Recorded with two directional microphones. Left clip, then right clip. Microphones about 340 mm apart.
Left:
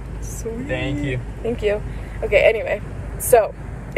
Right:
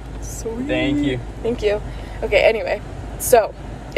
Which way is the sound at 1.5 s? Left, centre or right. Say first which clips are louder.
Right 1 dB; centre.